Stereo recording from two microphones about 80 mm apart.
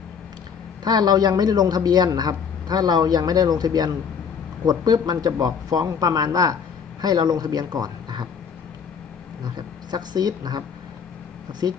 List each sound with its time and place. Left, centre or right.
0.9 s a man's voice: right
9.4 s a man's voice: right